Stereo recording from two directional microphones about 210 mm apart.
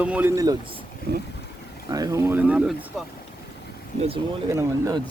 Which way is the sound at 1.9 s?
15° right (ahead or behind).